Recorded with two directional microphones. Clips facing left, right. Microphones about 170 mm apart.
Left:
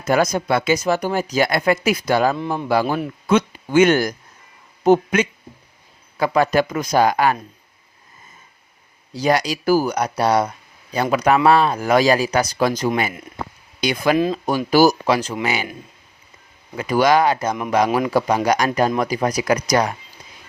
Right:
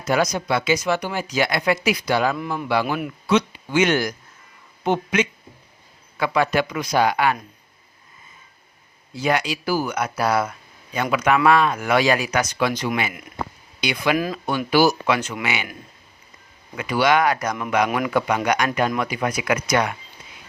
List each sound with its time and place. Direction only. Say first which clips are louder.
0.0 s speech: left 3 dB; 50° left (ahead or behind)
2.3 s speech: left 3 dB; 25° left (ahead or behind)
2.6 s speech: left 3 dB; 40° left (ahead or behind)
3.2 s speech: left 2 dB; 50° left (ahead or behind)
9.1 s speech: left 3 dB; 35° left (ahead or behind)
16.7 s speech: left 3 dB; 40° left (ahead or behind)